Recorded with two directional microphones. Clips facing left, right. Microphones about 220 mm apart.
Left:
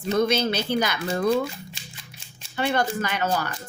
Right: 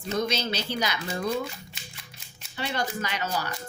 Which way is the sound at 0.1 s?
55° left (ahead or behind).